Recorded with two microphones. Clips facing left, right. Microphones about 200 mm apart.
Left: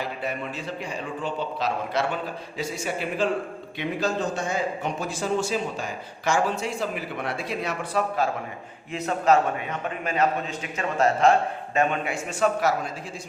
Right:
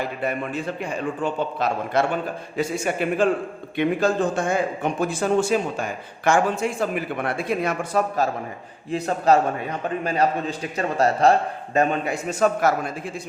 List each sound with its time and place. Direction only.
0.2 s a man's voice: 55° right (ahead or behind)